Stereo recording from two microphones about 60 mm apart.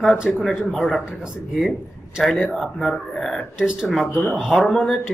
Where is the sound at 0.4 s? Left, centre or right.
Centre.